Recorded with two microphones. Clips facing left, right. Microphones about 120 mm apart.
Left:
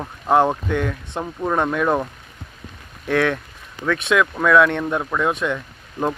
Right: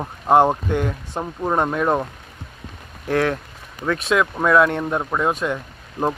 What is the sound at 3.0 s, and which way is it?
Speech, 30° right (ahead or behind).